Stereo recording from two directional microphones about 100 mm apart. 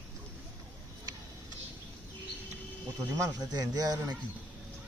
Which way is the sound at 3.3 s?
40° right (ahead or behind).